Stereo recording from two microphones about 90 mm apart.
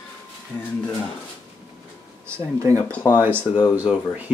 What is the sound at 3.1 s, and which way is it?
Speech, 25° right (ahead or behind).